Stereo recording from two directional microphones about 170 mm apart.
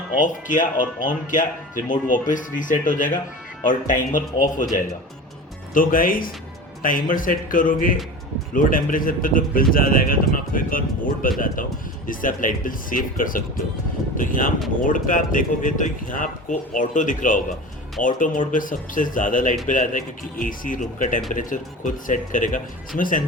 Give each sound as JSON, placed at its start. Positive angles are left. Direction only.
{"t": 0.2, "sound": "speech", "side_deg": 50}
{"t": 5.7, "sound": "speech", "side_deg": 55}